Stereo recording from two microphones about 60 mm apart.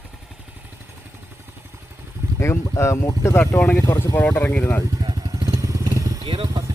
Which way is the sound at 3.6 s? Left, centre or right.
Left.